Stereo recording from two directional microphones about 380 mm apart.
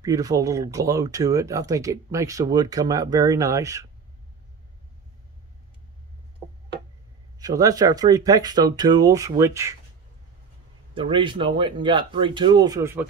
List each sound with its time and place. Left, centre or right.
0.0 s speech: centre
7.3 s speech: centre
11.0 s speech: centre